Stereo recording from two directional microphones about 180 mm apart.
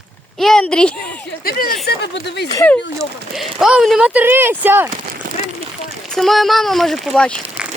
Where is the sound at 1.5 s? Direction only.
55° left (ahead or behind).